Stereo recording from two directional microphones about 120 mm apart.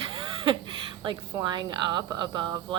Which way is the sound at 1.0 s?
35° right (ahead or behind).